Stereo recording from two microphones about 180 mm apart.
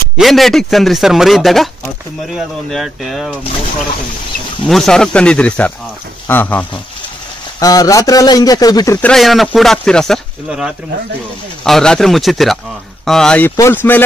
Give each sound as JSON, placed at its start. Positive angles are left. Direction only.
{"t": 0.2, "sound": "a man's voice", "side_deg": 0}
{"t": 4.6, "sound": "a man's voice", "side_deg": 0}
{"t": 7.6, "sound": "a man's voice", "side_deg": 20}
{"t": 9.0, "sound": "a man's voice", "side_deg": 0}